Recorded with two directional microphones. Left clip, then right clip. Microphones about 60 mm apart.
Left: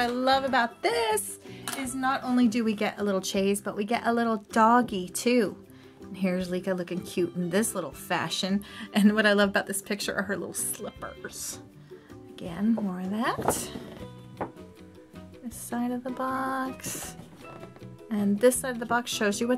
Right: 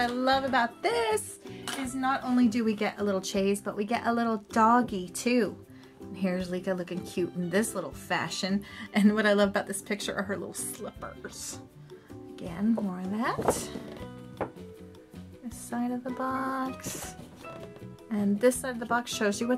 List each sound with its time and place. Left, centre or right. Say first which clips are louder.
0.0 s music: left 2 dB; left
14.4 s music: even; right
15.7 s music: left 1 dB; left
18.1 s music: left 2 dB; left